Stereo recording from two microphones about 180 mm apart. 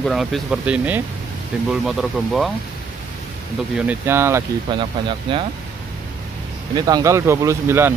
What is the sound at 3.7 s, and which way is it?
Speech, 10° right (ahead or behind).